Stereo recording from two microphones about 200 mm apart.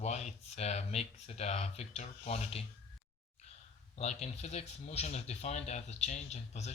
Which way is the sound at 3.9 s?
35° left (ahead or behind).